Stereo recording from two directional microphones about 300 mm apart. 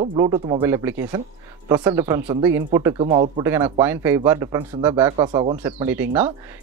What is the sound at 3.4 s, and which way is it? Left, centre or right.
Speech, centre.